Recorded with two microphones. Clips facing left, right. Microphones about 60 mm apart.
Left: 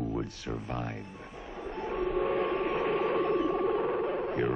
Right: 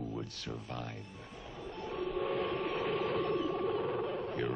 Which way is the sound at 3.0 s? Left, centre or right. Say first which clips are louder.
Left 5 dB; centre.